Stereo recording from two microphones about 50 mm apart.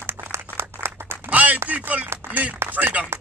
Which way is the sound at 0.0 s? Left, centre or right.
Right.